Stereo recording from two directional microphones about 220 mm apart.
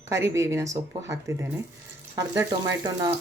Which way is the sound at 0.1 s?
15° right (ahead or behind).